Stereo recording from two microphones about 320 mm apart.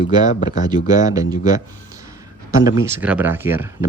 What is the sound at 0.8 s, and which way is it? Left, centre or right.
Speech, centre.